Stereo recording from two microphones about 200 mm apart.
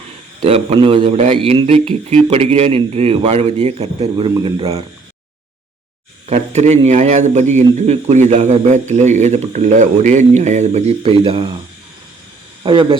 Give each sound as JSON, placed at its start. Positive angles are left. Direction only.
{"t": 0.4, "sound": "a man's voice", "side_deg": -30}
{"t": 6.2, "sound": "a man's voice", "side_deg": -35}
{"t": 12.6, "sound": "a man's voice", "side_deg": -25}